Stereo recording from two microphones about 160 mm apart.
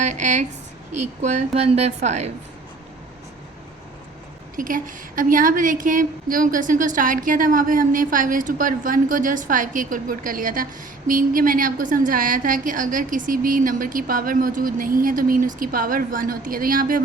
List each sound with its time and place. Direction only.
0.0 s a woman's voice: 50° right (ahead or behind)
4.5 s a woman's voice: 60° right (ahead or behind)